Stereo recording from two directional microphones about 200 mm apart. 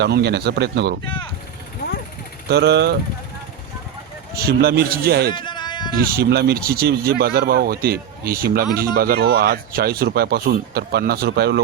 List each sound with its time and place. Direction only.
0.0 s speech: 55° right (ahead or behind)
1.0 s speech: 25° left (ahead or behind)
2.5 s speech: 55° right (ahead or behind)
4.4 s speech: 50° right (ahead or behind)
5.3 s a sound: 20° left (ahead or behind)
6.0 s speech: 50° right (ahead or behind)